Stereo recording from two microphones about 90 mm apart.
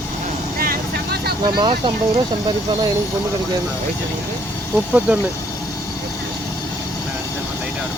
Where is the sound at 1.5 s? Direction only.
65° right (ahead or behind).